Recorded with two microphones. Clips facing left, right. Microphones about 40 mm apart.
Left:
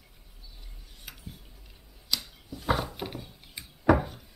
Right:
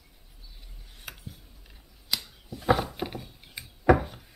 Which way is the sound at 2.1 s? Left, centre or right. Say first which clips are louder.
Even; centre.